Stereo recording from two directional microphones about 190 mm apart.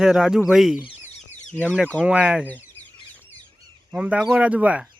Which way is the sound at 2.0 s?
5° right (ahead or behind).